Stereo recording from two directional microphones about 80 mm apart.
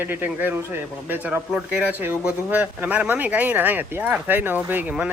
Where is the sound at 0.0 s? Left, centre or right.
Right.